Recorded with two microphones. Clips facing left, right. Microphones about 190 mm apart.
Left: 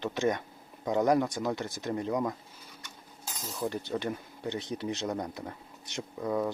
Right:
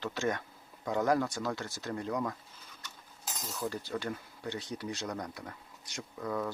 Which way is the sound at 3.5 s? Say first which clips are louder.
Left 4 dB; 20° left (ahead or behind).